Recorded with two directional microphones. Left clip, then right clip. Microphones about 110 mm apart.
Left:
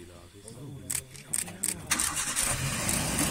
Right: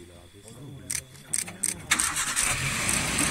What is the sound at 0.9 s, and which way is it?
Camera, 35° left (ahead or behind).